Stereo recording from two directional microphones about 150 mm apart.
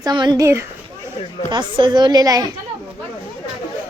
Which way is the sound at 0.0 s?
30° right (ahead or behind).